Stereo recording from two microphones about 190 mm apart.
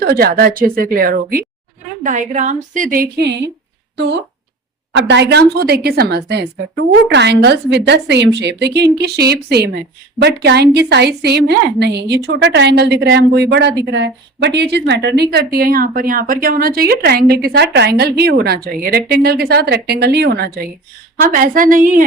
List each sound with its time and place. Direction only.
0.0 s a woman's voice: 55° right (ahead or behind)